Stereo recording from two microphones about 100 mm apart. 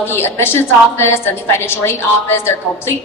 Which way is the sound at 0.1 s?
25° left (ahead or behind).